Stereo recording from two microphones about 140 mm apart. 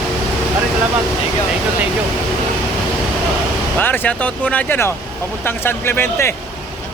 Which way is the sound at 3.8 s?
15° left (ahead or behind).